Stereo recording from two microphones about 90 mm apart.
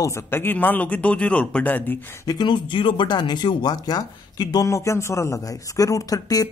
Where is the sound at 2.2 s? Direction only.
60° left (ahead or behind).